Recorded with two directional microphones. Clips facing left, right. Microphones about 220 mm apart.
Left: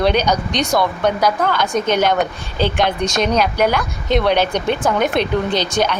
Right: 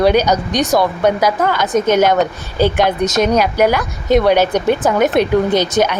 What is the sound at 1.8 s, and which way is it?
Speech, 45° right (ahead or behind).